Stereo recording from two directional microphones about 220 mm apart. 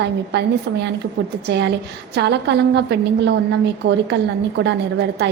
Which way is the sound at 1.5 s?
50° right (ahead or behind).